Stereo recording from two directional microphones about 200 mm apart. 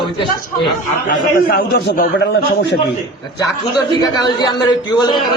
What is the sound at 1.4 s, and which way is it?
A man's voice, 50° left (ahead or behind).